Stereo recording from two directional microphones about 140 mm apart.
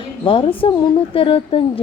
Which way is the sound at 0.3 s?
40° left (ahead or behind).